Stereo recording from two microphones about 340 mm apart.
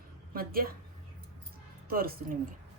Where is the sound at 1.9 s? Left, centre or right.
Right.